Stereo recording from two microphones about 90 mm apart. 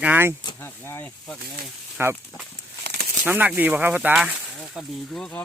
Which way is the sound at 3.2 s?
20° right (ahead or behind).